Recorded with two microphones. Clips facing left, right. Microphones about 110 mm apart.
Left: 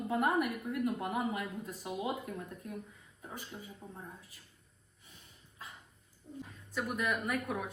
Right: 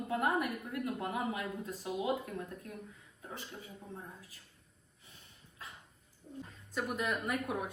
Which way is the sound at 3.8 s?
20° left (ahead or behind).